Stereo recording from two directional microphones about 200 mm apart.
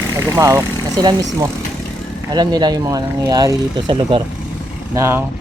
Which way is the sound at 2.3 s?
20° right (ahead or behind).